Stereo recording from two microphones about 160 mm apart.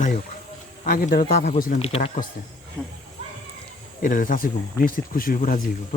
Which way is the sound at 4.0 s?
55° left (ahead or behind).